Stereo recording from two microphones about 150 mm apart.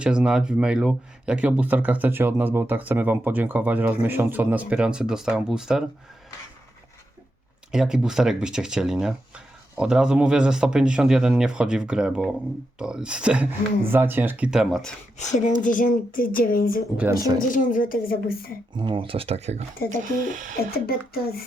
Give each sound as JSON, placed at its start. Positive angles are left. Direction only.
{"t": 0.0, "sound": "speech", "side_deg": -5}
{"t": 7.7, "sound": "speech", "side_deg": -5}
{"t": 15.2, "sound": "speech", "side_deg": 55}
{"t": 17.2, "sound": "speech", "side_deg": -25}
{"t": 17.5, "sound": "speech", "side_deg": 60}
{"t": 18.7, "sound": "speech", "side_deg": -30}
{"t": 19.9, "sound": "speech", "side_deg": -60}
{"t": 20.8, "sound": "speech", "side_deg": 90}